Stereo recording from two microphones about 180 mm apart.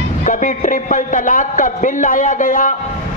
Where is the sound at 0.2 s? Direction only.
45° left (ahead or behind).